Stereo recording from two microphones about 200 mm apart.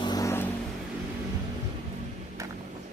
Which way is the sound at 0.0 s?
20° left (ahead or behind).